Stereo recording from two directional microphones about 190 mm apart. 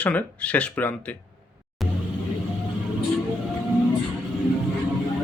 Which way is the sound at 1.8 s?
Centre (ahead or behind).